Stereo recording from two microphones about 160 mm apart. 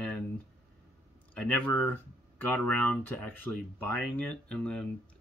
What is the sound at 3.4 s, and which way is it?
Speech, 10° left (ahead or behind).